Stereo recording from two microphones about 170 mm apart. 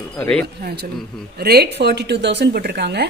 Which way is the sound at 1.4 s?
65° right (ahead or behind).